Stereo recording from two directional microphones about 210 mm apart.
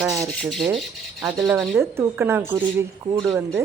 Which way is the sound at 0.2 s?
Centre (ahead or behind).